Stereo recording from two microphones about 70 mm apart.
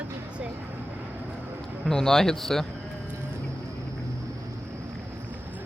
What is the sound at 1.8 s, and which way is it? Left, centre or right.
Speech, centre.